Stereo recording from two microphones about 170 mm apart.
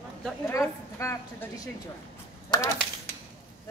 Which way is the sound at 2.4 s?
20° left (ahead or behind).